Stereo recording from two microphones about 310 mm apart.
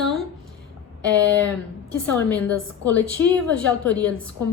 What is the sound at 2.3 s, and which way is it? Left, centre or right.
A woman's voice, centre.